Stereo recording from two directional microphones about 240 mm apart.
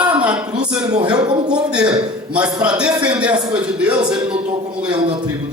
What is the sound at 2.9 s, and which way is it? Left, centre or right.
Speech, centre.